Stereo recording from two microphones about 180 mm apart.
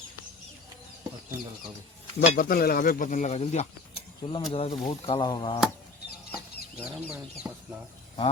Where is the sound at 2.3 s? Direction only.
50° left (ahead or behind); by 5.5 s 25° left (ahead or behind).